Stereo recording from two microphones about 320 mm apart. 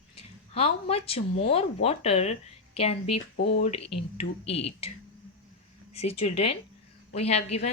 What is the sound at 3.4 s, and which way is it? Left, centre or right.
Speech, left.